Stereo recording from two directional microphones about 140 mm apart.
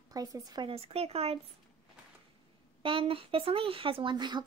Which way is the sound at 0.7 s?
45° right (ahead or behind).